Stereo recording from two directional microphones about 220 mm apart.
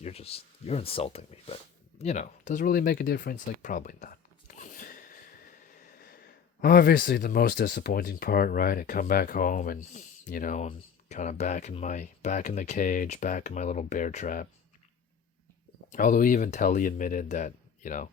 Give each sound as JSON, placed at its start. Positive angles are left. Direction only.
{"t": 0.0, "sound": "speech", "side_deg": 25}
{"t": 15.9, "sound": "speech", "side_deg": 40}